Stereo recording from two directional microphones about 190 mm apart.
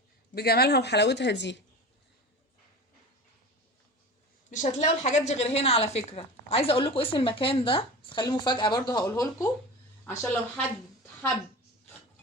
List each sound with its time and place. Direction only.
0.3 s speech: 55° left (ahead or behind)
4.5 s a woman's voice: 40° left (ahead or behind); by 10.7 s 10° left (ahead or behind)